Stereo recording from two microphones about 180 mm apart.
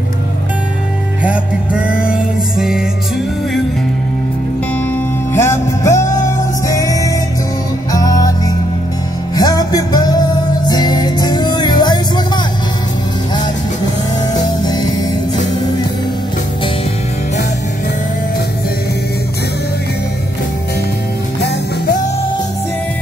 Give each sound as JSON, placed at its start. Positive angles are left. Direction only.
{"t": 1.2, "sound": "music", "side_deg": -5}
{"t": 5.3, "sound": "music", "side_deg": 15}
{"t": 9.3, "sound": "music", "side_deg": 20}
{"t": 14.6, "sound": "music", "side_deg": 20}